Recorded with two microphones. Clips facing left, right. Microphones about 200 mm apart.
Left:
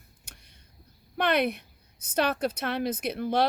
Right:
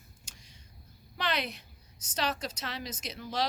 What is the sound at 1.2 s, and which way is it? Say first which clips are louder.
A woman's voice: left 9 dB; 55° left (ahead or behind).